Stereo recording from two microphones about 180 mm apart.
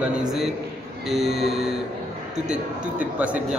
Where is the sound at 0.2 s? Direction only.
Centre (ahead or behind).